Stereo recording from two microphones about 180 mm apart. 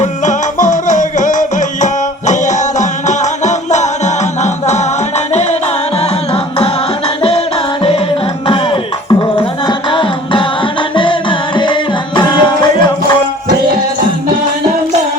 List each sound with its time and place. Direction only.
0.0 s music: 45° left (ahead or behind)
8.4 s music: 30° left (ahead or behind)